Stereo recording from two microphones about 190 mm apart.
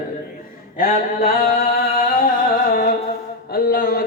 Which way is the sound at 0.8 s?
50° left (ahead or behind).